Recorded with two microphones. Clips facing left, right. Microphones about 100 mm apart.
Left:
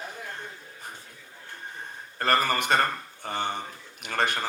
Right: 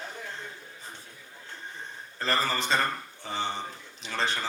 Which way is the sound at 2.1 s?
60° left (ahead or behind).